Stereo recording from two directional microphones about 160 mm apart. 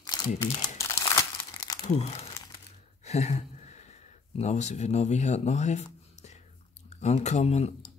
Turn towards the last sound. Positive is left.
turn(degrees=40)  # may be behind; listen again after turning